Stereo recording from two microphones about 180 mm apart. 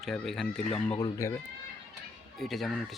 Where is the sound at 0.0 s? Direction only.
Centre (ahead or behind).